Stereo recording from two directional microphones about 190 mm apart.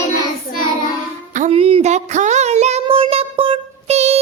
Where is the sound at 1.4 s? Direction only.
30° right (ahead or behind).